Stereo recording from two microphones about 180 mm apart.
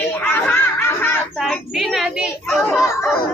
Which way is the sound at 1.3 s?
Centre (ahead or behind).